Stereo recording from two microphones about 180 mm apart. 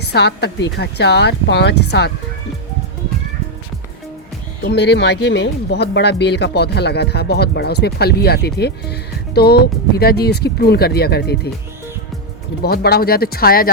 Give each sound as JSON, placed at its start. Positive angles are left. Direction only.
{"t": 0.1, "sound": "speech", "side_deg": 70}
{"t": 4.6, "sound": "speech", "side_deg": 70}
{"t": 12.6, "sound": "speech", "side_deg": 60}